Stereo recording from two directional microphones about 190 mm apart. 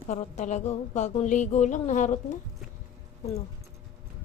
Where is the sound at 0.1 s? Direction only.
35° left (ahead or behind).